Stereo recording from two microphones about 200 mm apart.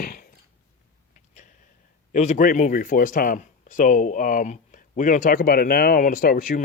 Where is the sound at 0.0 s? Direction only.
45° left (ahead or behind).